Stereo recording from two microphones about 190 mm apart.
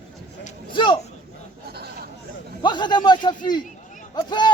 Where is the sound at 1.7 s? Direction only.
55° right (ahead or behind).